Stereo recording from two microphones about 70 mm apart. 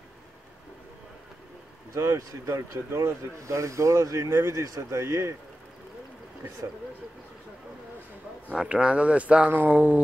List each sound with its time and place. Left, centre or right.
2.0 s speech: right
8.5 s speech: centre